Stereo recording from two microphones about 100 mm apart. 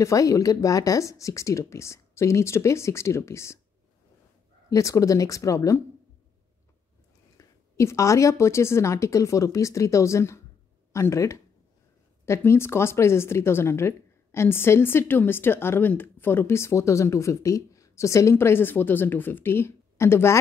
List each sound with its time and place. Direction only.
0.0 s speech: 35° left (ahead or behind)
4.6 s a woman's voice: 30° left (ahead or behind)
7.3 s a woman's voice: 30° left (ahead or behind)